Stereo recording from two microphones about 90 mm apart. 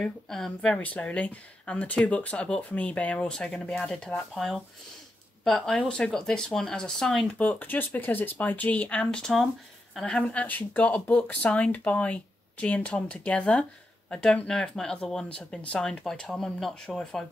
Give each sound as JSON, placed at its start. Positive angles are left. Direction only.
{"t": 0.0, "sound": "speech", "side_deg": 5}
{"t": 0.7, "sound": "speech", "side_deg": 15}
{"t": 7.3, "sound": "speech", "side_deg": 20}